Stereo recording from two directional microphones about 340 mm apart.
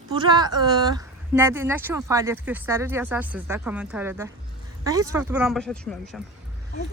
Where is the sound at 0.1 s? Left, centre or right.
Centre.